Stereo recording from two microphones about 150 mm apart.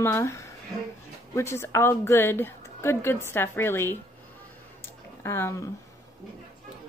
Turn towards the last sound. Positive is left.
turn(degrees=15)  # may be behind; listen again after turning